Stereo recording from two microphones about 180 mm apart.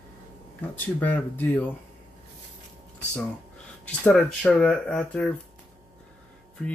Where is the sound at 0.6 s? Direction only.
10° left (ahead or behind).